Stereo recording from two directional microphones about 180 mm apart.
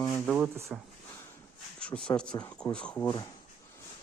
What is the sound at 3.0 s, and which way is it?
Speech, 25° left (ahead or behind).